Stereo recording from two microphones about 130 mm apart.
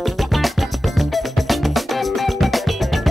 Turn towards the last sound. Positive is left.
turn(degrees=0)  # may be behind; listen again after turning